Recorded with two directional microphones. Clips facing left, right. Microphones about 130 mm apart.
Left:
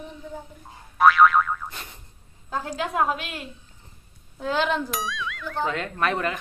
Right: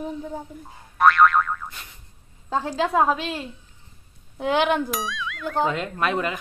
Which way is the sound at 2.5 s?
30° right (ahead or behind).